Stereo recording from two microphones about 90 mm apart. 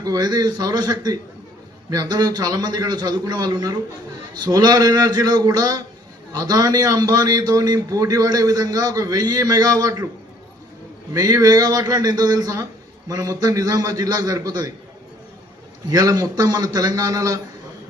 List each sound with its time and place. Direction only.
0.0 s a man's voice: 45° right (ahead or behind)
11.1 s a man's voice: 40° right (ahead or behind)
15.9 s a man's voice: 45° right (ahead or behind)